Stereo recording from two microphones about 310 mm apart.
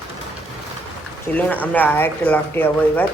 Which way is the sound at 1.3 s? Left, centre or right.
Centre.